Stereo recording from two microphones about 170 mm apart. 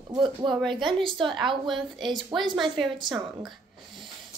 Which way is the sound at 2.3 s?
25° right (ahead or behind).